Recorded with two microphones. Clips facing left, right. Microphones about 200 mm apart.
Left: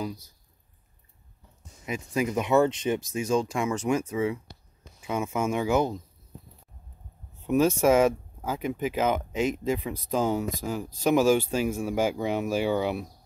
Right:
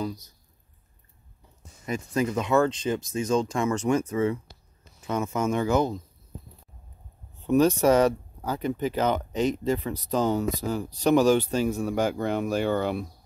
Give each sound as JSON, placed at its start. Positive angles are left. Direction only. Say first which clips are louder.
{"t": 1.9, "sound": "speech", "louder": "right 2 dB", "side_deg": 10}
{"t": 7.4, "sound": "speech", "louder": "right 1 dB", "side_deg": 5}